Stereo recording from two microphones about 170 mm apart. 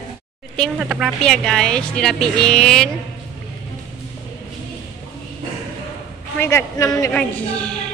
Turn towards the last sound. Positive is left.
turn(degrees=5)  # may be behind; listen again after turning